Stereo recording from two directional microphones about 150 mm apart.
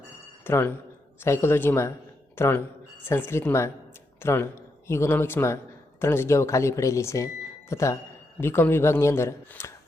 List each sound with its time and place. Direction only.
0.4 s a man's voice: 15° left (ahead or behind)